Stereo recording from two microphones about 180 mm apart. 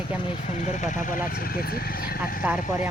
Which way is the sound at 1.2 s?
55° left (ahead or behind).